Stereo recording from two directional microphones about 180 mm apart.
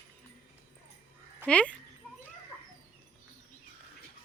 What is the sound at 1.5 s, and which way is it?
Speech, 5° left (ahead or behind).